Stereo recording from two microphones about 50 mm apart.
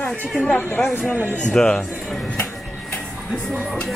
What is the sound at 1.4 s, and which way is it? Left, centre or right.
Speech, centre.